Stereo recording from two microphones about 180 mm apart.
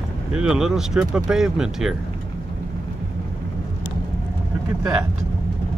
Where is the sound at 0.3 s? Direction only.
5° right (ahead or behind).